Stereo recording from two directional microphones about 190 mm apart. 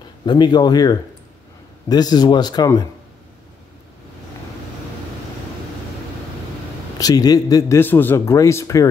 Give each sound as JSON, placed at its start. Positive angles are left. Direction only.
{"t": 0.2, "sound": "a man's voice", "side_deg": 25}
{"t": 7.0, "sound": "a man's voice", "side_deg": 20}